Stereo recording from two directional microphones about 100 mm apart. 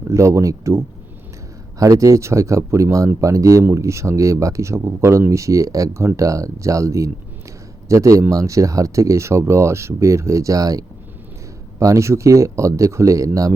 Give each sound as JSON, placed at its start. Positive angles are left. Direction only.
{"t": 0.1, "sound": "speech", "side_deg": -30}